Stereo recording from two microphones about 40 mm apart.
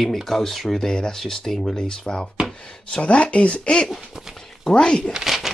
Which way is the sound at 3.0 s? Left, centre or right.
Left.